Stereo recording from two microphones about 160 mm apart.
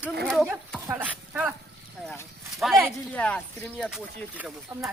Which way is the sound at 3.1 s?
10° left (ahead or behind).